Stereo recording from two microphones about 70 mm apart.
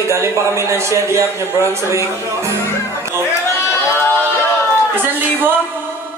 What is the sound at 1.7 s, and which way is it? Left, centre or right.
Speech, right.